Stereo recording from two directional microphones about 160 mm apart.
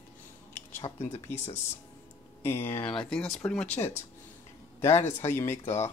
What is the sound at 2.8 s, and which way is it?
Speech, 5° left (ahead or behind).